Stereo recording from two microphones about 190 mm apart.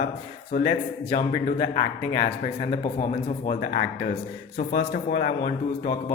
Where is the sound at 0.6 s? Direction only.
25° left (ahead or behind).